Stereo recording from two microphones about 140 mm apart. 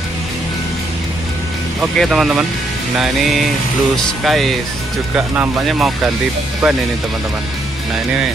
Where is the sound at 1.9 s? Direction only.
Centre (ahead or behind).